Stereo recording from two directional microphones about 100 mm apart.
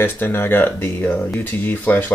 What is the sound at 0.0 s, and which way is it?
Speech, 20° left (ahead or behind).